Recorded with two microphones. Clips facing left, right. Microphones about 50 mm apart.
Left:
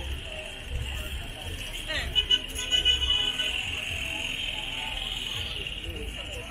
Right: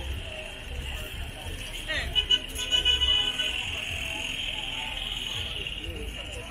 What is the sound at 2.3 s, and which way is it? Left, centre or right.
Music, left.